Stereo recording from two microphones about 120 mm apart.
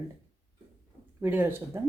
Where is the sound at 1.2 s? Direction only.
15° right (ahead or behind).